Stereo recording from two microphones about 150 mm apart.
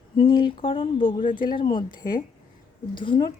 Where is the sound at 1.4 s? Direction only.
35° left (ahead or behind).